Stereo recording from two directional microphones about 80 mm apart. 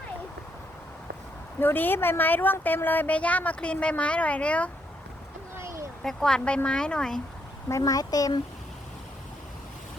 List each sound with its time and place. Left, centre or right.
1.5 s a woman's voice: left
5.5 s a sound: right
6.0 s speech: centre
7.7 s speech: left